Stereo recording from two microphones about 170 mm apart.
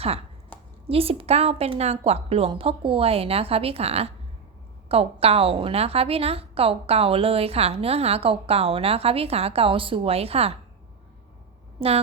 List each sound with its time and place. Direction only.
0.9 s a woman's voice: 35° right (ahead or behind)
11.8 s a woman's voice: 35° right (ahead or behind)